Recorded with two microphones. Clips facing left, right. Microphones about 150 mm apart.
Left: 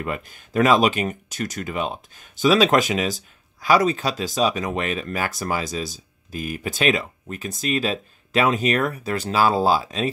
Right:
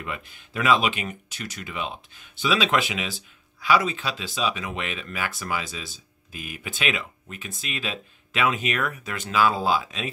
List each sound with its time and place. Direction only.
0.0 s speech: 45° left (ahead or behind)